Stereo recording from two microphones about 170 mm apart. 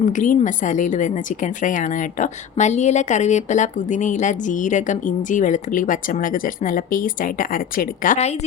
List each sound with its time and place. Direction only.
0.0 s a woman's voice: 50° left (ahead or behind)